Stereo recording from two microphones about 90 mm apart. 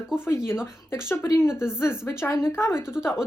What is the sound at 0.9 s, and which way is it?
Speech, 25° left (ahead or behind).